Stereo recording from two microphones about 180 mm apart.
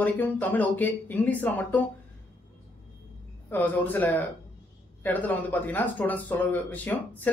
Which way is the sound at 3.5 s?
10° left (ahead or behind).